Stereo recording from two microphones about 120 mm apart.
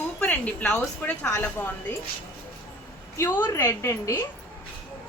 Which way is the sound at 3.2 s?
15° left (ahead or behind).